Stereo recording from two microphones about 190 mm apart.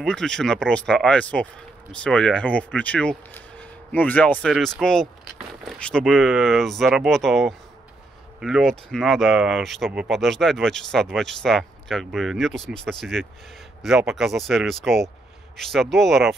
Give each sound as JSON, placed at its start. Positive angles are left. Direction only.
{"t": 0.0, "sound": "speech", "side_deg": 5}